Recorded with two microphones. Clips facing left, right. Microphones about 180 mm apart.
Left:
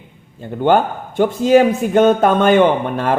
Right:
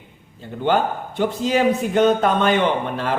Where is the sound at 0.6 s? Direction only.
50° left (ahead or behind).